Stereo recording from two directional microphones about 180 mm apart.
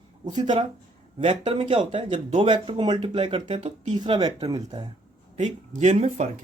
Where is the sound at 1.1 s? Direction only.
30° right (ahead or behind).